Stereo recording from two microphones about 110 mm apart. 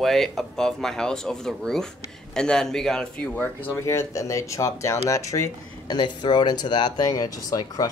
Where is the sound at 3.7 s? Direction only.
25° left (ahead or behind).